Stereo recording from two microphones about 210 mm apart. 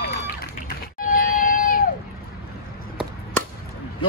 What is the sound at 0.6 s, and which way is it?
Bleat, 40° left (ahead or behind).